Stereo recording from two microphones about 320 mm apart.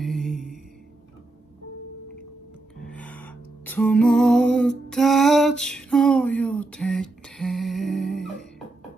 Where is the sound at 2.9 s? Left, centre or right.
Centre.